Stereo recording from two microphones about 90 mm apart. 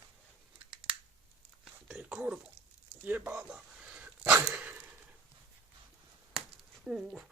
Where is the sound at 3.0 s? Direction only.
20° right (ahead or behind).